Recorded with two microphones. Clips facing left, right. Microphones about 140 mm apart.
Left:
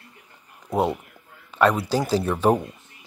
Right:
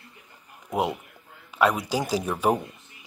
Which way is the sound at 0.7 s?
10° right (ahead or behind).